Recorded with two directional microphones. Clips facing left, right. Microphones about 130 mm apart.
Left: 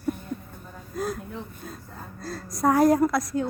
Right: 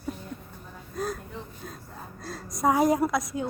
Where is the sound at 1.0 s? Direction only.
5° left (ahead or behind).